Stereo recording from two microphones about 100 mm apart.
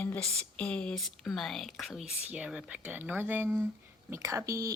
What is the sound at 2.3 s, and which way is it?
Speech, 10° right (ahead or behind).